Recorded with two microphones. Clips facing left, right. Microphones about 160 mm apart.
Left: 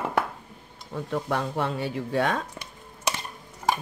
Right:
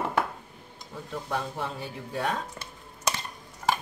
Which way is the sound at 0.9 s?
65° left (ahead or behind).